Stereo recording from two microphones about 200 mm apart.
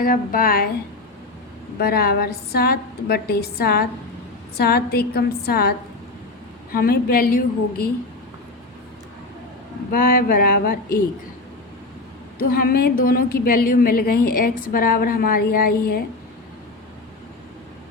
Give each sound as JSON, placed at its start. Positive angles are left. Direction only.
{"t": 0.0, "sound": "a woman's voice", "side_deg": 45}
{"t": 1.8, "sound": "a woman's voice", "side_deg": 50}
{"t": 9.9, "sound": "a woman's voice", "side_deg": 45}
{"t": 12.4, "sound": "a woman's voice", "side_deg": 45}